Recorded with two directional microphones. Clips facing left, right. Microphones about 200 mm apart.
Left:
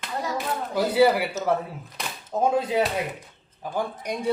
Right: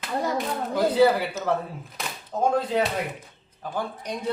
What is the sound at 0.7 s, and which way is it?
Speech, 10° left (ahead or behind).